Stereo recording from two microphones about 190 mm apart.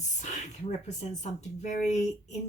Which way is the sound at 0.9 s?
40° left (ahead or behind).